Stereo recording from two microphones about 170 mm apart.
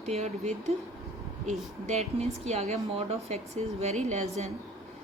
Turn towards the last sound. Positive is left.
turn(degrees=-40)  # may be behind; listen again after turning